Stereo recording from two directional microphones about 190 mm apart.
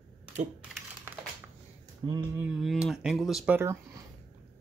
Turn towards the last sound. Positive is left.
turn(degrees=-10)  # may be behind; listen again after turning